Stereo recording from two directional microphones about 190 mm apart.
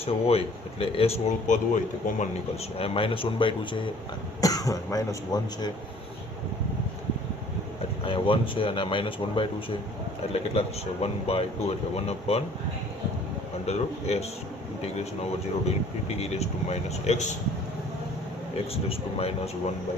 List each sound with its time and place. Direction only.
0.0 s speech: 30° left (ahead or behind)
2.7 s speech: 30° left (ahead or behind)
8.0 s speech: 25° left (ahead or behind)
11.0 s speech: 30° left (ahead or behind)
13.7 s speech: 35° left (ahead or behind)
18.7 s speech: 30° left (ahead or behind)